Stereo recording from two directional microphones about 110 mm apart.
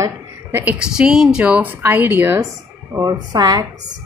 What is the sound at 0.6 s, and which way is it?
Speech, 15° right (ahead or behind).